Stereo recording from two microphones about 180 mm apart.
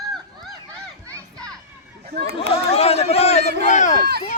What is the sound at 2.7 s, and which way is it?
Run, 35° left (ahead or behind).